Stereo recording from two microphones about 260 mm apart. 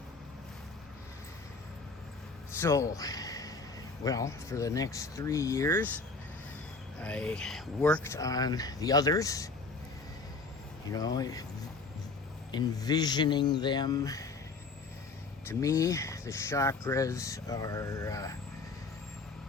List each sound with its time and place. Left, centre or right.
2.6 s a man's voice: centre
7.0 s speech: centre
10.9 s speech: centre
12.5 s speech: centre
15.4 s speech: centre